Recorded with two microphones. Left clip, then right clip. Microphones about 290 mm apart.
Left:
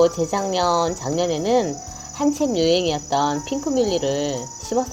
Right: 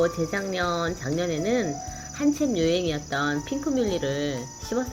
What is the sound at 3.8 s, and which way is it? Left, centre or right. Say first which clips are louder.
Speech: left 7 dB; centre.